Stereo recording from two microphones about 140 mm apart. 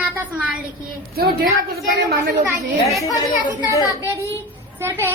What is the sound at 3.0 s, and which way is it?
A child's voice, 25° left (ahead or behind).